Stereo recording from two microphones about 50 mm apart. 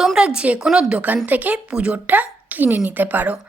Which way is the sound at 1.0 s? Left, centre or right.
Right.